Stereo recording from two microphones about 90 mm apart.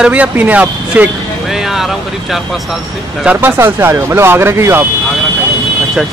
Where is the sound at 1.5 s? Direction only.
5° right (ahead or behind).